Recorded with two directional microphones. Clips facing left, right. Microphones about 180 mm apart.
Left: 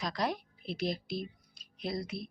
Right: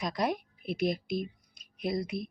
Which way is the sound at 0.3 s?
50° right (ahead or behind).